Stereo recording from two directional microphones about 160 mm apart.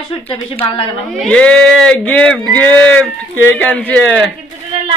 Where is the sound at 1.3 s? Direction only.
5° left (ahead or behind).